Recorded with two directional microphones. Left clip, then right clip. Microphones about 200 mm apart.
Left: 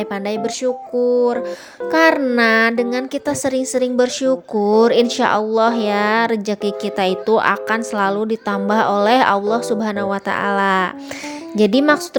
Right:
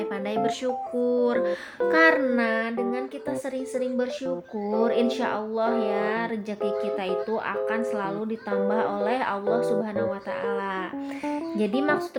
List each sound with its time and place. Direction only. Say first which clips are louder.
0.9 s music: left 9 dB; 5° left (ahead or behind)
1.2 s speech: left 5 dB; 20° left (ahead or behind)
2.3 s a woman's voice: left 11 dB; 45° left (ahead or behind)